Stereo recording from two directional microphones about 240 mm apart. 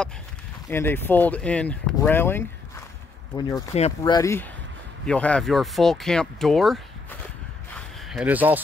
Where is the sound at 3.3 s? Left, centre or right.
Left.